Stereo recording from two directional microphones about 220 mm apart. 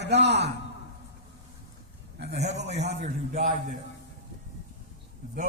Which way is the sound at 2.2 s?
50° right (ahead or behind).